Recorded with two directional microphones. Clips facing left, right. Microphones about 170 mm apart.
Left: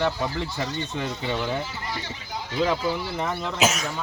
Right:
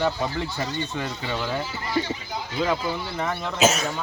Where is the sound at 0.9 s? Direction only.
Centre (ahead or behind).